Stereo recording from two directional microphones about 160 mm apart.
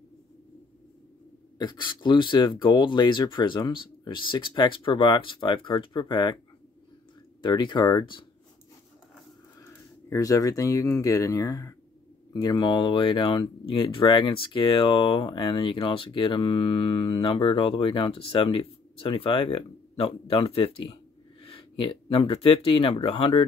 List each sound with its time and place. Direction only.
1.6 s speech: 30° left (ahead or behind)
7.4 s speech: 30° left (ahead or behind)
10.0 s speech: 20° left (ahead or behind); by 23.4 s 35° left (ahead or behind)